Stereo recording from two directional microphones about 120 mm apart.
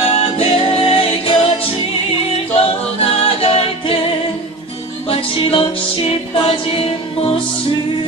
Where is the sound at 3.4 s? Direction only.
55° left (ahead or behind).